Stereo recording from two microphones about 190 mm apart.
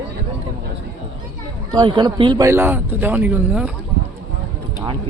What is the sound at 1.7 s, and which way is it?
Speech, 20° right (ahead or behind).